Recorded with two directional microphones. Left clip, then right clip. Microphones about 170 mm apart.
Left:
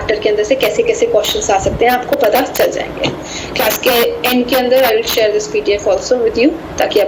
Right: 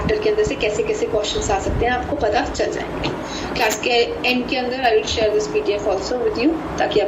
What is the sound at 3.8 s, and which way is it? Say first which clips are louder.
A woman's voice: left 7 dB; 55° left (ahead or behind).